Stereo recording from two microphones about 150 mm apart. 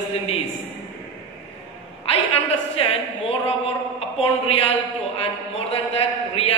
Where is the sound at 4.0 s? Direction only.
40° left (ahead or behind).